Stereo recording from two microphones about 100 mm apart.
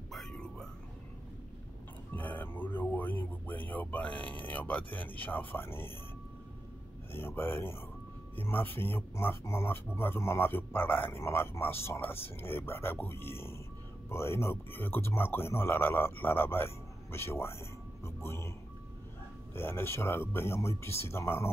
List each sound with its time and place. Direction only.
0.1 s whispering: 5° left (ahead or behind)
2.1 s music: 15° left (ahead or behind)
7.1 s a man's voice: 20° left (ahead or behind)
19.5 s a man's voice: 25° left (ahead or behind)